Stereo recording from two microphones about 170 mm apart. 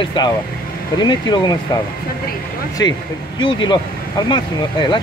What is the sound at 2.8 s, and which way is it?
Speech, 20° left (ahead or behind).